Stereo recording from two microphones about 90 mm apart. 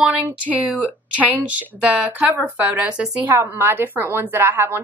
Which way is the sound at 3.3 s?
25° right (ahead or behind).